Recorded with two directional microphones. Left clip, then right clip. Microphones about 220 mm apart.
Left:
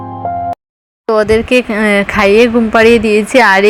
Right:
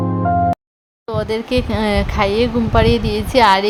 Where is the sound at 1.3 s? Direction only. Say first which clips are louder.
Left 9 dB; 10° left (ahead or behind).